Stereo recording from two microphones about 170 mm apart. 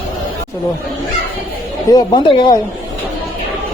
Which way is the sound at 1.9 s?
25° left (ahead or behind).